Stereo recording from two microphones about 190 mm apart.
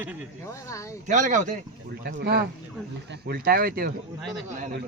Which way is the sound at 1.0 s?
40° right (ahead or behind).